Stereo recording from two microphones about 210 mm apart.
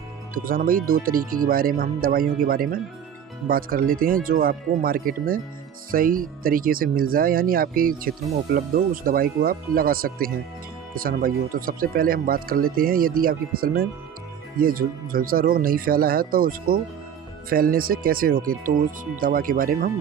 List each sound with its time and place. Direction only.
0.4 s speech: 45° right (ahead or behind)